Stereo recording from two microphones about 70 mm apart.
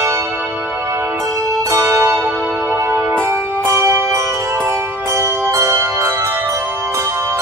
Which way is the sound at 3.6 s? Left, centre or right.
Right.